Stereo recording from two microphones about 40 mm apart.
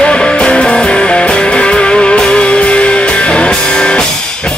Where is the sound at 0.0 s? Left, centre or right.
Centre.